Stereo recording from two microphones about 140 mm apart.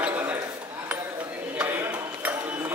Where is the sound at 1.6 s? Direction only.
15° right (ahead or behind).